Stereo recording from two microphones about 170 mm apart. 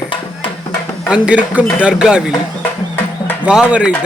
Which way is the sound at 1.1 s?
5° right (ahead or behind).